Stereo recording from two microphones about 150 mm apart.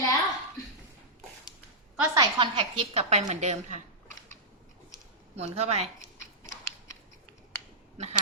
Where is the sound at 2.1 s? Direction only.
35° right (ahead or behind); by 3.5 s 50° right (ahead or behind).